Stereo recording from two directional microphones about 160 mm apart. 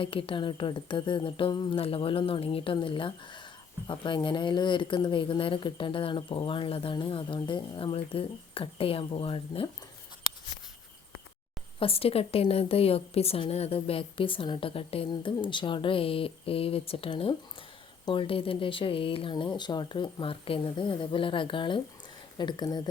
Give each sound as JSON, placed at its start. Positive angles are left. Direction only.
{"t": 0.0, "sound": "a woman's voice", "side_deg": 35}
{"t": 11.8, "sound": "a woman's voice", "side_deg": 35}